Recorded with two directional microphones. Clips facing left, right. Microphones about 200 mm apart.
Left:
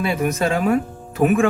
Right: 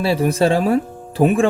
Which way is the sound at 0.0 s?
30° right (ahead or behind).